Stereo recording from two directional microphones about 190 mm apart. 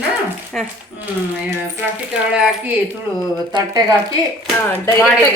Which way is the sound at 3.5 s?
20° right (ahead or behind).